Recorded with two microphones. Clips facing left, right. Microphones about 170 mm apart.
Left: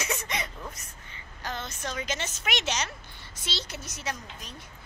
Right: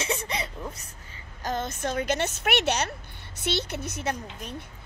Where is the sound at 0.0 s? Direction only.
30° right (ahead or behind).